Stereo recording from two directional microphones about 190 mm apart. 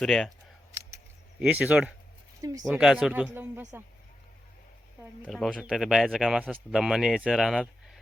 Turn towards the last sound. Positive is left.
turn(degrees=0)  # may be behind; listen again after turning